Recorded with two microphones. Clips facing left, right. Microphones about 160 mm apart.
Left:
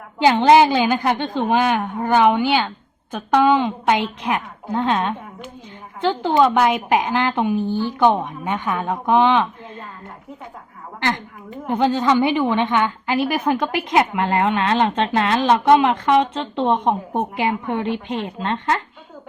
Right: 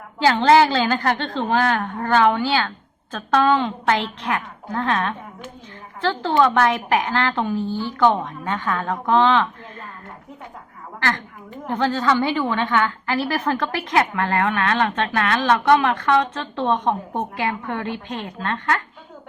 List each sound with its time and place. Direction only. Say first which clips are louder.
0.2 s a woman's voice: left 2 dB; 15° left (ahead or behind)
11.6 s a woman's voice: left 3 dB; 15° left (ahead or behind)